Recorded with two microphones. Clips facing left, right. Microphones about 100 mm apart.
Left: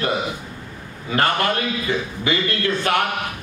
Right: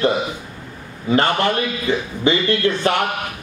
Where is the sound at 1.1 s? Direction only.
30° right (ahead or behind).